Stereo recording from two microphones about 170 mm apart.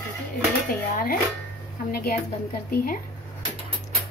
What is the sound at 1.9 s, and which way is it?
Speech, 60° left (ahead or behind).